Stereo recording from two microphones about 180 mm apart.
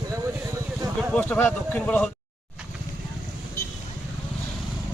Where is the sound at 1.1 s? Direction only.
10° left (ahead or behind).